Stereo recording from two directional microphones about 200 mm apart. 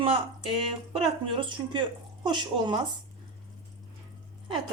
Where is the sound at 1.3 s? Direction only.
25° right (ahead or behind).